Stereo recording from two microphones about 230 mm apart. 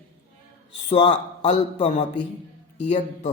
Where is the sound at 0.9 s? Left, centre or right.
Left.